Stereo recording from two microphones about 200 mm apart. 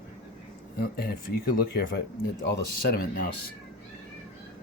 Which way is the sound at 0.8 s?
50° left (ahead or behind).